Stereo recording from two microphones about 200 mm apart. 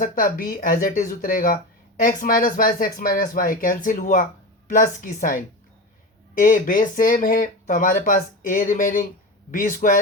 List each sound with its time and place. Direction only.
0.0 s a woman's voice: 45° left (ahead or behind)